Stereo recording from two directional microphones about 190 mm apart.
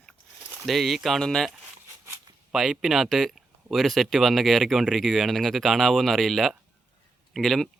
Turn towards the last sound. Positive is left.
turn(degrees=0)  # may be behind; listen again after turning